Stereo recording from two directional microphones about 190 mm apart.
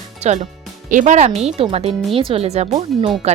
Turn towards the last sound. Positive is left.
turn(degrees=-35)  # may be behind; listen again after turning